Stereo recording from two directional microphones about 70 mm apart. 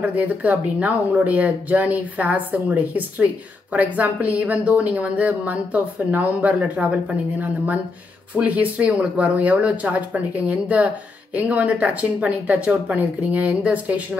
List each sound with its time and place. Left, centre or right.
0.0 s speech: right